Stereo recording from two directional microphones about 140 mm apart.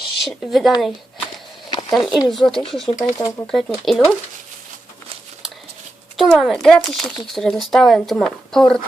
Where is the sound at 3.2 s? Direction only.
25° left (ahead or behind).